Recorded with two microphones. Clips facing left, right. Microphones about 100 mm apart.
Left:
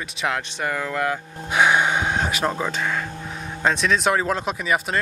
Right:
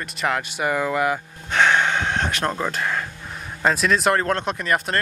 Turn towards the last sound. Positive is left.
turn(degrees=0)  # may be behind; listen again after turning